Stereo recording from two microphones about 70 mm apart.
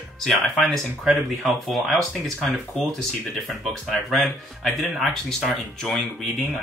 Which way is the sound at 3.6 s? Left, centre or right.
Centre.